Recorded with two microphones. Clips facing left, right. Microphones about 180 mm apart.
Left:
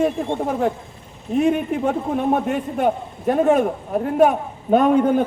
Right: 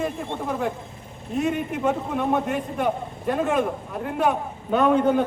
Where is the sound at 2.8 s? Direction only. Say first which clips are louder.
Left 6 dB; 45° left (ahead or behind).